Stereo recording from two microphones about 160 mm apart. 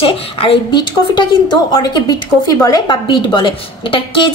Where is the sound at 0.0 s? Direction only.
35° left (ahead or behind).